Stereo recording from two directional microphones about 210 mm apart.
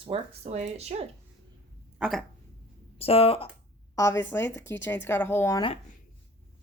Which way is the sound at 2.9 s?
30° left (ahead or behind).